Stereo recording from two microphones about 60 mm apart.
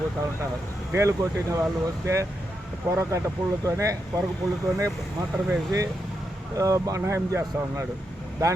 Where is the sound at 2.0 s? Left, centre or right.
Right.